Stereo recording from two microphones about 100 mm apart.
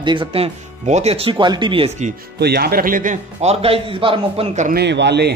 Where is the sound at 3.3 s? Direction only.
85° right; by 4.5 s 65° right (ahead or behind).